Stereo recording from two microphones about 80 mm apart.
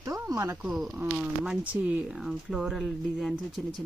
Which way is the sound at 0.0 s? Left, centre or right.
Right.